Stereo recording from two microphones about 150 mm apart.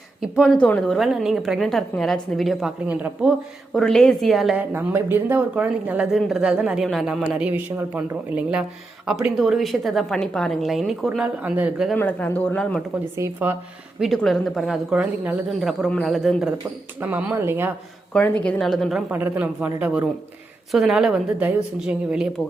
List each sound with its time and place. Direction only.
0.2 s a woman's voice: 5° right (ahead or behind)
3.8 s a woman's voice: 5° left (ahead or behind)
4.7 s a woman's voice: 15° right (ahead or behind)
11.9 s speech: 10° left (ahead or behind)
13.1 s a woman's voice: 15° right (ahead or behind)
14.0 s a woman's voice: centre (ahead or behind); by 17.7 s 15° right (ahead or behind)
18.1 s a woman's voice: 10° left (ahead or behind)
19.1 s a woman's voice: 10° right (ahead or behind)